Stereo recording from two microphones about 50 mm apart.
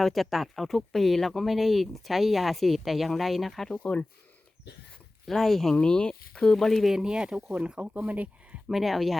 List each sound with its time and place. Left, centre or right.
0.0 s speech: centre
3.8 s speech: left
5.2 s speech: centre
5.7 s speech: centre
6.6 s speech: centre
6.9 s speech: centre; by 8.3 s right
8.6 s speech: centre